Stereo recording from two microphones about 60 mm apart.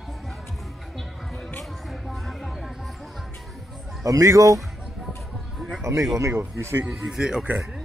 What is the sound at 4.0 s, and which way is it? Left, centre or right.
Speech, right.